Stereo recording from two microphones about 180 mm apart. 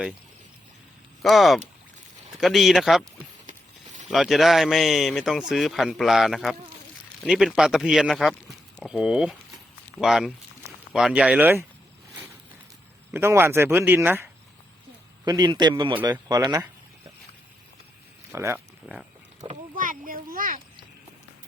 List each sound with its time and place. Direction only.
1.2 s speech: centre (ahead or behind)
4.1 s speech: centre (ahead or behind)
13.1 s speech: 15° right (ahead or behind)
15.2 s a man's voice: 20° right (ahead or behind)
18.3 s speech: 15° right (ahead or behind)
19.7 s a sound: 50° right (ahead or behind)